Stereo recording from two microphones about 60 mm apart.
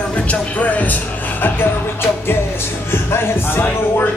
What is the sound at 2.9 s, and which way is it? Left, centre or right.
Speech, left.